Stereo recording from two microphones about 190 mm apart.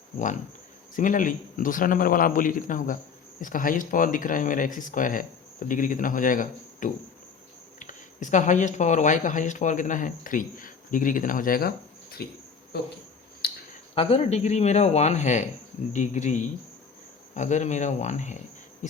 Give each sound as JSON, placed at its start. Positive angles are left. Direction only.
{"t": 0.9, "sound": "speech", "side_deg": 45}
{"t": 12.2, "sound": "insect", "side_deg": 55}
{"t": 13.4, "sound": "a sound", "side_deg": 55}
{"t": 13.9, "sound": "speech", "side_deg": 30}